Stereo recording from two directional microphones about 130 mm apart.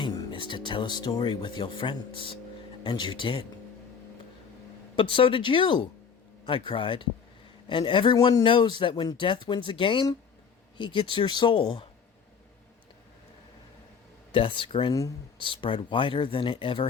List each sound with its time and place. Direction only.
0.0 s a sound: 35° left (ahead or behind)
0.3 s speech: 40° left (ahead or behind)
4.9 s speech: 40° left (ahead or behind)
14.3 s speech: 40° left (ahead or behind)